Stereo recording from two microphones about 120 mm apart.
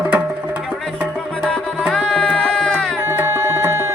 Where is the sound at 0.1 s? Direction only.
10° right (ahead or behind).